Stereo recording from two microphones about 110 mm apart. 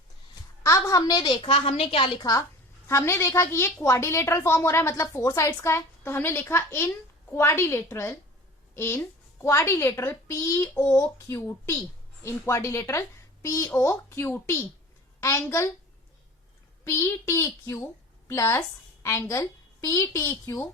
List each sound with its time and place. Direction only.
0.6 s a woman's voice: 30° left (ahead or behind)
1.4 s a woman's voice: 55° left (ahead or behind)
2.8 s a woman's voice: 25° left (ahead or behind)
16.8 s a woman's voice: 25° left (ahead or behind)